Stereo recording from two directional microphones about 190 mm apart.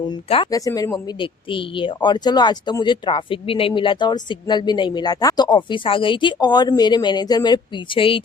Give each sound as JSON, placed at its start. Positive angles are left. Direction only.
{"t": 0.5, "sound": "speech", "side_deg": 20}